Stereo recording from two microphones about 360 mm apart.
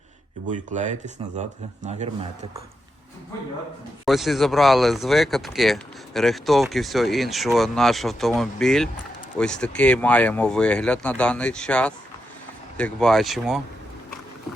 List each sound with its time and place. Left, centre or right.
0.4 s a man's voice: right
4.0 s speech: centre